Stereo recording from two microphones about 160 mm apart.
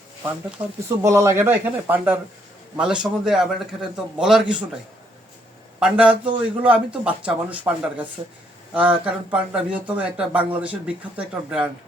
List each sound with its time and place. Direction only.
0.6 s speech: 30° right (ahead or behind)
1.0 s a man's voice: 15° right (ahead or behind)
5.8 s speech: 5° right (ahead or behind)